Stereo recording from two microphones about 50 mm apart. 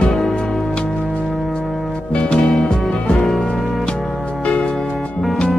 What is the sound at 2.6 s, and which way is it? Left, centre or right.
Music, centre.